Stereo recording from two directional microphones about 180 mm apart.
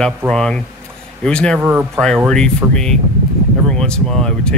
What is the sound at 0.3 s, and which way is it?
Speech, 5° left (ahead or behind).